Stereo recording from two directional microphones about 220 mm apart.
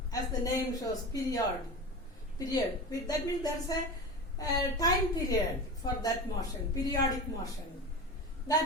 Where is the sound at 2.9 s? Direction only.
15° left (ahead or behind).